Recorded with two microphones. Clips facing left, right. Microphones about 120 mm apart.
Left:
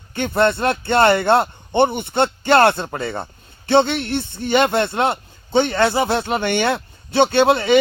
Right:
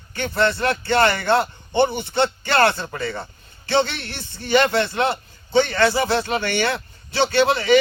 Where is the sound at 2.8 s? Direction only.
25° left (ahead or behind).